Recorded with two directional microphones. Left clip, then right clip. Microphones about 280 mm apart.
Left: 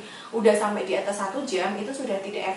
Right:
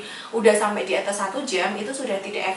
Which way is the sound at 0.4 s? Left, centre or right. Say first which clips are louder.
Right 3 dB; centre.